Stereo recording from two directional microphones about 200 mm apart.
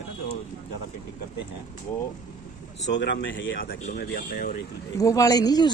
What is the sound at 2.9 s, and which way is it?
Speech, 60° left (ahead or behind).